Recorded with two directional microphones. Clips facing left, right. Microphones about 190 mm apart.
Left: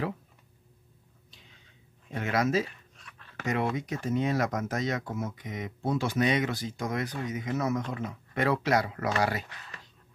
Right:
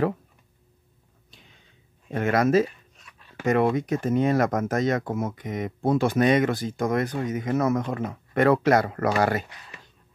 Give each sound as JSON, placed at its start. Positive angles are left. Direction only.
{"t": 2.1, "sound": "speech", "side_deg": -55}